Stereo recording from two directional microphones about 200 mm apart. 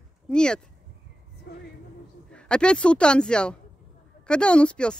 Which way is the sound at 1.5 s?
55° left (ahead or behind).